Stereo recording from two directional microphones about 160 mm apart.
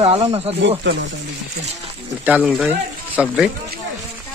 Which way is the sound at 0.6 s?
90° right.